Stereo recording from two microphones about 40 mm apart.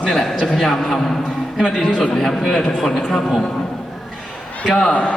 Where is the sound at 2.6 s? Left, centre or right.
Centre.